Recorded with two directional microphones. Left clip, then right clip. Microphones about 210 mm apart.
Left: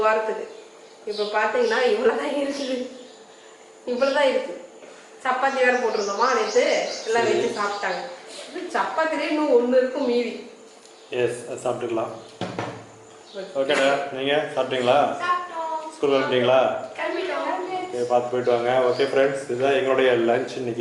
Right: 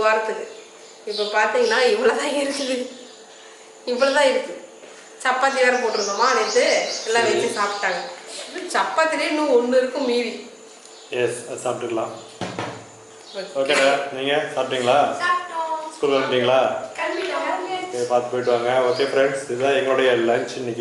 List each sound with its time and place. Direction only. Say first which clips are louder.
0.2 s speech: right 1 dB; 15° left (ahead or behind)
3.9 s speech: right 3 dB; 5° left (ahead or behind)
16.0 s a sound: right 1 dB; 5° left (ahead or behind)
18.2 s speech: right 1 dB; 10° left (ahead or behind)